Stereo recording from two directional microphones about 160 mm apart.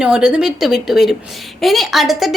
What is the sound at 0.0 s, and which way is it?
A woman's voice, 5° right (ahead or behind).